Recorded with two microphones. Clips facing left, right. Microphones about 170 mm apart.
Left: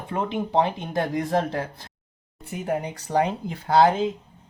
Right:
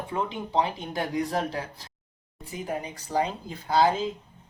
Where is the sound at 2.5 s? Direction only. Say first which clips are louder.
Left 5 dB; 65° left (ahead or behind).